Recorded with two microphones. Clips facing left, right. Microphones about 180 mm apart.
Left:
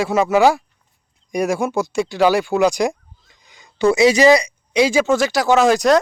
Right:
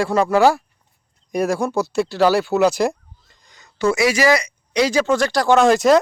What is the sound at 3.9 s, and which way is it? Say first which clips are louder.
Speech: left 5 dB; 20° left (ahead or behind).